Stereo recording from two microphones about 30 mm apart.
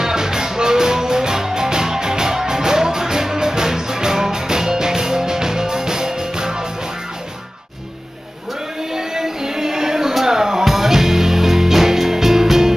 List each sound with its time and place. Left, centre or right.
0.0 s music: centre
8.9 s music: centre